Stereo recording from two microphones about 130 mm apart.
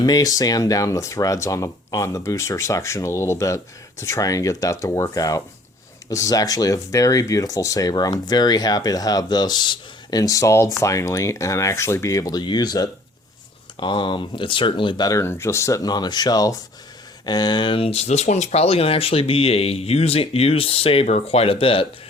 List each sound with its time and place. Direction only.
0.0 s speech: 30° left (ahead or behind); by 21.8 s 45° left (ahead or behind)